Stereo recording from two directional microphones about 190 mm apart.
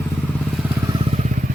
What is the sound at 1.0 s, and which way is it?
Motorcycle, 35° right (ahead or behind).